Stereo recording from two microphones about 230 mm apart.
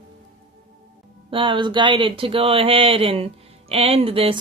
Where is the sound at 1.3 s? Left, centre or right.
Right.